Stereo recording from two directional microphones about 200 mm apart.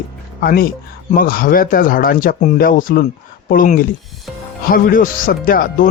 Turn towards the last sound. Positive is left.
turn(degrees=45)  # may be behind; listen again after turning